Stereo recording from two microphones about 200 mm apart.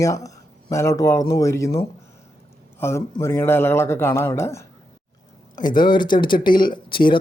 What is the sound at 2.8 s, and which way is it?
Speech, 15° left (ahead or behind).